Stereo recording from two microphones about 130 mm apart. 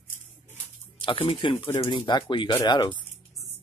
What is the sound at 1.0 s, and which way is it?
Speech, 45° left (ahead or behind).